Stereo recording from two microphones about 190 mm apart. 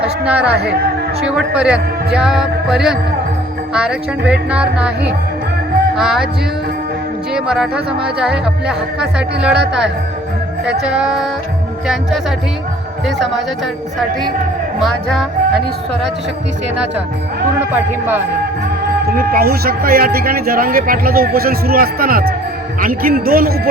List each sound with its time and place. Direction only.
0.0 s speech: 5° right (ahead or behind)
7.3 s speech: 5° right (ahead or behind)
13.1 s speech: centre (ahead or behind)
14.8 s speech: centre (ahead or behind)
19.1 s speech: 50° right (ahead or behind)